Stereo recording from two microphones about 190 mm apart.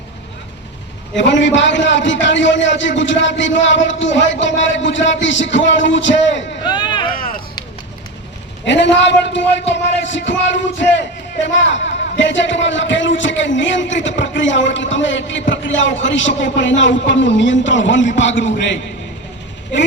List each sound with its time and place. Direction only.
1.1 s a man's voice: 70° left (ahead or behind)
6.7 s a sound: 25° left (ahead or behind)
8.6 s a man's voice: 70° left (ahead or behind)